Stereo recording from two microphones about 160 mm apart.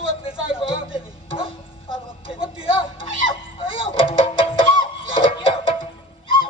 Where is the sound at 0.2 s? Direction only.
35° left (ahead or behind).